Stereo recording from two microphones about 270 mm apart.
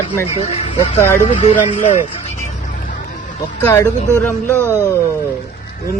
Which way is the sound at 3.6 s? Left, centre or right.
Centre.